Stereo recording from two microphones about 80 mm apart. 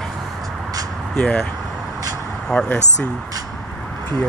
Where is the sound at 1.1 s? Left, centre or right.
Centre.